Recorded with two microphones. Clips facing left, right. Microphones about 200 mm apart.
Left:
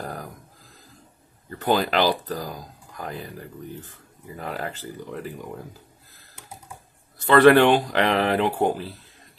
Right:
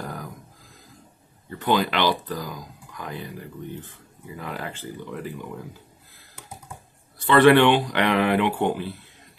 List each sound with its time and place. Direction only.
0.0 s a sound: 40° left (ahead or behind)
1.6 s speech: 40° left (ahead or behind)
7.2 s speech: 40° left (ahead or behind)